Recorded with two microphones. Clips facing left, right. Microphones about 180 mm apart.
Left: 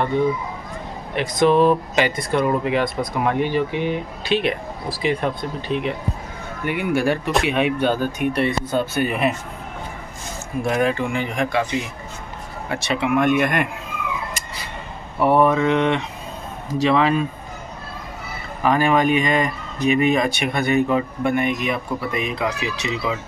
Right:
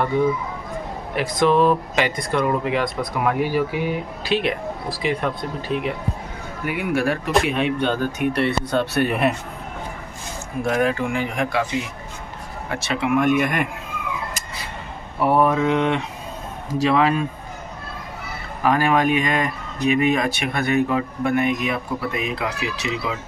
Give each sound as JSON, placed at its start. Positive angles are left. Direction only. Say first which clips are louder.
{"t": 1.1, "sound": "speech", "louder": "left 1 dB", "side_deg": 0}
{"t": 8.3, "sound": "speech", "louder": "even", "side_deg": 15}
{"t": 8.6, "sound": "speech", "louder": "right 1 dB", "side_deg": 0}
{"t": 10.6, "sound": "speech", "louder": "even", "side_deg": 0}
{"t": 15.1, "sound": "speech", "louder": "left 2 dB", "side_deg": -5}
{"t": 18.6, "sound": "speech", "louder": "left 1 dB", "side_deg": -5}